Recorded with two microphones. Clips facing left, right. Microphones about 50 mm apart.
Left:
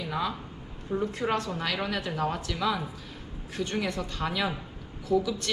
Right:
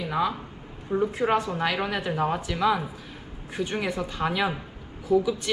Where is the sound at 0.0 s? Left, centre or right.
Centre.